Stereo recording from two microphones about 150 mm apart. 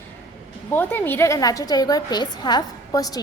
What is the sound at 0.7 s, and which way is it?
A woman's voice, 10° left (ahead or behind).